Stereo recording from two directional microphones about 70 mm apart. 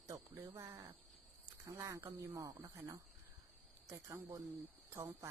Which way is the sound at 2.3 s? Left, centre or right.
Right.